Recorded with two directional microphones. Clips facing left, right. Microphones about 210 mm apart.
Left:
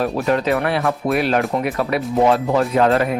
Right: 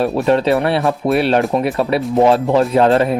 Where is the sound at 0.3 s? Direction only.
30° right (ahead or behind).